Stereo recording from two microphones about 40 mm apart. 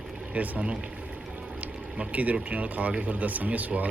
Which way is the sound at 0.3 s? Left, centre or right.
Right.